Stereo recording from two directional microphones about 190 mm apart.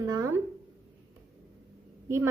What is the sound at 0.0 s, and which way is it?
Speech, 20° right (ahead or behind).